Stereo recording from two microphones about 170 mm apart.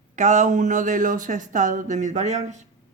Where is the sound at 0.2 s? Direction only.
45° right (ahead or behind).